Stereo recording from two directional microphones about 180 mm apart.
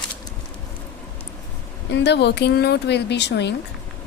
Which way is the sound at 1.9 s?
70° left (ahead or behind).